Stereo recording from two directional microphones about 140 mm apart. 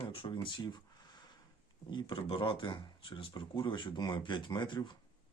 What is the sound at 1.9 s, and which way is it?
Speech, 35° left (ahead or behind).